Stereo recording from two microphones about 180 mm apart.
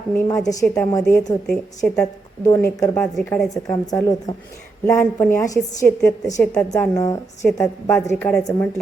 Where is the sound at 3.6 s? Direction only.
20° left (ahead or behind).